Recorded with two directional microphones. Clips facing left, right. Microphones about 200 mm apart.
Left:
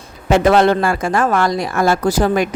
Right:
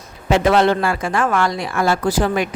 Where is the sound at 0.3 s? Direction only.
45° left (ahead or behind).